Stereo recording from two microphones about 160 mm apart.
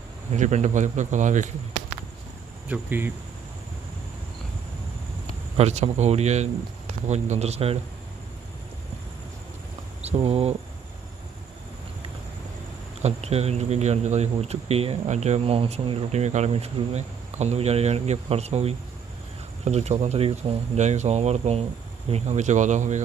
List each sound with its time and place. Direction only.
0.3 s speech: 45° right (ahead or behind)
2.6 s speech: 10° right (ahead or behind)
5.5 s speech: 45° right (ahead or behind)
10.0 s speech: 40° right (ahead or behind)
13.0 s speech: 40° right (ahead or behind)